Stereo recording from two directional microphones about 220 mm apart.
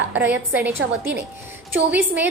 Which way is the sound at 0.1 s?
10° right (ahead or behind).